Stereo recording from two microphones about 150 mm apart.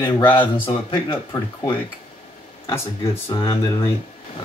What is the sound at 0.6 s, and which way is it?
Speech, 35° left (ahead or behind).